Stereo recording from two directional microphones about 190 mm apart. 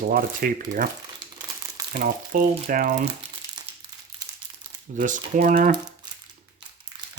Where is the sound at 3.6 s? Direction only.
20° right (ahead or behind).